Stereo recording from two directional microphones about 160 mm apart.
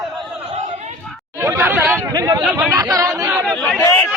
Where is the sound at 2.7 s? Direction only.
20° right (ahead or behind).